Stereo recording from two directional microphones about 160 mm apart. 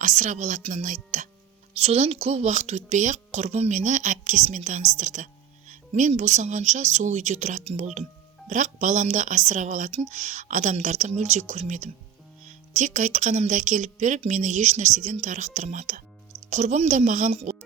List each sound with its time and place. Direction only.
0.0 s speech: 50° right (ahead or behind)
1.7 s speech: 40° right (ahead or behind)